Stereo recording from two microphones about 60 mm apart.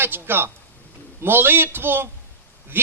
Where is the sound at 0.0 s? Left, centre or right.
Right.